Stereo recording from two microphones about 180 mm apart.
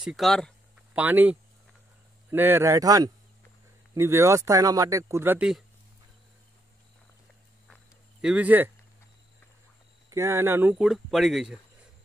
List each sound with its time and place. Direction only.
0.0 s speech: centre (ahead or behind)
7.7 s a sound: 5° right (ahead or behind)
10.0 s speech: 15° right (ahead or behind)